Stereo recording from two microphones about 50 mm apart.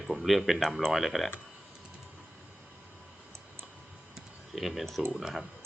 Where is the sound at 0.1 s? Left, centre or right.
Centre.